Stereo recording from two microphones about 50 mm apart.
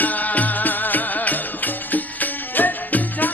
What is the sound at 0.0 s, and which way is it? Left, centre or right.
Music, left.